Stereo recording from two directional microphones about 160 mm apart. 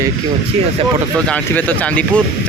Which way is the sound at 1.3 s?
10° left (ahead or behind).